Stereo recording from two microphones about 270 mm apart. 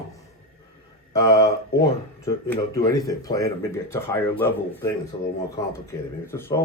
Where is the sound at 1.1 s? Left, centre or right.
Centre.